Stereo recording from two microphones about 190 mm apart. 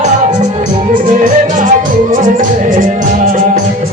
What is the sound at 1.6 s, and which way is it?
Music, 45° right (ahead or behind).